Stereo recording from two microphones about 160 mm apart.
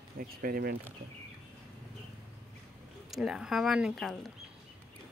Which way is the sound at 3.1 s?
Centre (ahead or behind).